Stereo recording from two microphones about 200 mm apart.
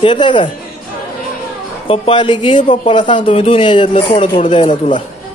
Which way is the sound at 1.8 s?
25° left (ahead or behind).